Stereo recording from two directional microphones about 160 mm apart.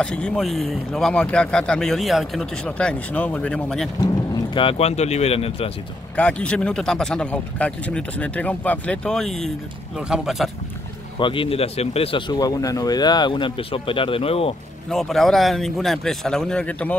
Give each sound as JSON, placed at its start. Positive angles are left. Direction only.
{"t": 0.0, "sound": "speech", "side_deg": 5}
{"t": 4.6, "sound": "speech", "side_deg": 35}
{"t": 6.1, "sound": "speech", "side_deg": 5}
{"t": 11.1, "sound": "speech", "side_deg": 30}
{"t": 12.4, "sound": "speech", "side_deg": 20}
{"t": 14.9, "sound": "speech", "side_deg": 0}